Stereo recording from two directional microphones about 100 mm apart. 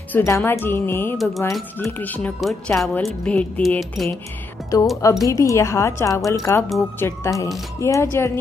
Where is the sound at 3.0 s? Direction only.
10° left (ahead or behind).